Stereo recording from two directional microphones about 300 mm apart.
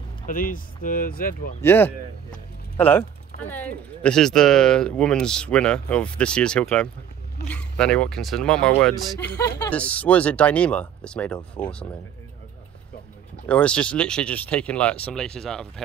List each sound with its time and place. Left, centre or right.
0.3 s speech: left
1.6 s speech: centre
13.5 s speech: centre